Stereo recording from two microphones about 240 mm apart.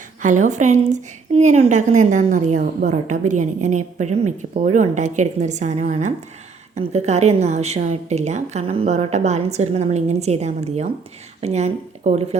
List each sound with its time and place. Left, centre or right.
0.2 s a woman's voice: right